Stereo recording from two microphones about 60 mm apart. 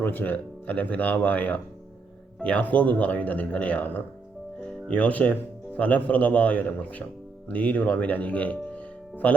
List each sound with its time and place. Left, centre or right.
0.0 s speech: left